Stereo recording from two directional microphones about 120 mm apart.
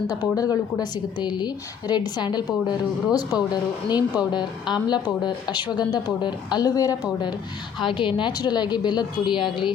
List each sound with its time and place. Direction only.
0.1 s speech: 30° left (ahead or behind)